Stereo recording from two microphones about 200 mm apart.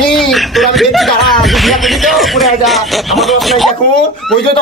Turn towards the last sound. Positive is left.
turn(degrees=0)  # may be behind; listen again after turning